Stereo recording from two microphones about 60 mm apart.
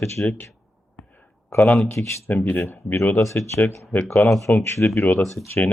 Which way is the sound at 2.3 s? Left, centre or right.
Left.